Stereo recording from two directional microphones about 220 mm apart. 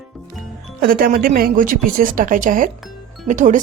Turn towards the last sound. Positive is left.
turn(degrees=-35)  # may be behind; listen again after turning